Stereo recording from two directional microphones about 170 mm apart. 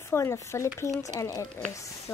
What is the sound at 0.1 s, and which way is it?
Speech, 15° left (ahead or behind).